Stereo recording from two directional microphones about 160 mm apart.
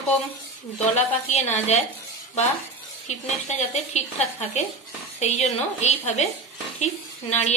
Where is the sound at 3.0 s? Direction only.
45° left (ahead or behind).